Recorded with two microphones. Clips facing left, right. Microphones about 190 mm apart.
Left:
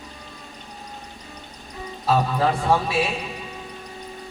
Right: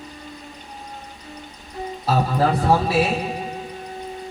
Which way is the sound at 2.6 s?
40° right (ahead or behind).